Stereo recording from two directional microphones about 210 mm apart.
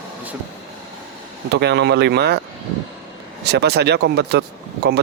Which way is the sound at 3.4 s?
50° right (ahead or behind).